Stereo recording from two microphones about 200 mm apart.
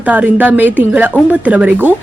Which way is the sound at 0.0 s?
10° right (ahead or behind).